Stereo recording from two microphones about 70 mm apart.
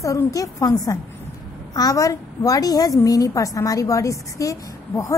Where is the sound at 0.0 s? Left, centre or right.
Left.